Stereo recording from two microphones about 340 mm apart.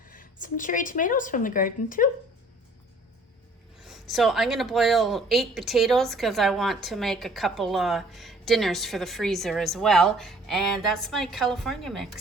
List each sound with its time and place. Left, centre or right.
0.0 s speech: left
3.8 s speech: centre